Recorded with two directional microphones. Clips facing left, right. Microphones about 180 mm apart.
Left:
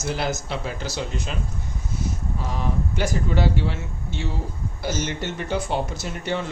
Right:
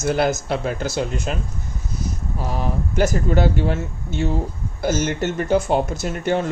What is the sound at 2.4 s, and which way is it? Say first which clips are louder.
Speech: right 3 dB; 45° right (ahead or behind).